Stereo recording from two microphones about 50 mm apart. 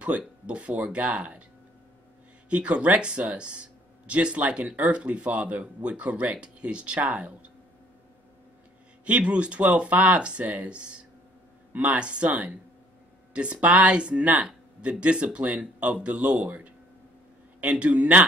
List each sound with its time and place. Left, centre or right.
0.0 s speech: right
2.5 s speech: right
9.0 s speech: right